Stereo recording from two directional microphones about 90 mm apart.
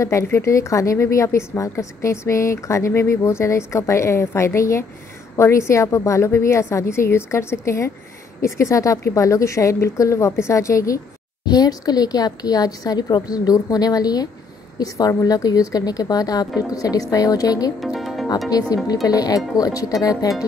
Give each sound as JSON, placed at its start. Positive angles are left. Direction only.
{"t": 0.0, "sound": "a woman's voice", "side_deg": 35}
{"t": 11.4, "sound": "a woman's voice", "side_deg": 45}
{"t": 17.7, "sound": "music", "side_deg": 0}
{"t": 18.5, "sound": "a woman's voice", "side_deg": 45}